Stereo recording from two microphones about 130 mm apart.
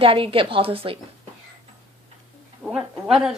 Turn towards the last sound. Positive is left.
turn(degrees=-5)  # may be behind; listen again after turning